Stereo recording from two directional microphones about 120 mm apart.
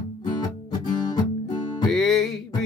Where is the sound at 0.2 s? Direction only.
35° left (ahead or behind).